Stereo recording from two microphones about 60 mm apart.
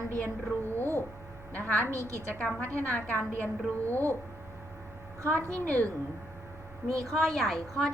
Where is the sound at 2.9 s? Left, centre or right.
Left.